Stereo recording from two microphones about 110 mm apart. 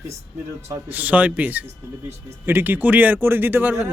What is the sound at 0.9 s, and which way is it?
A man's voice, 15° right (ahead or behind).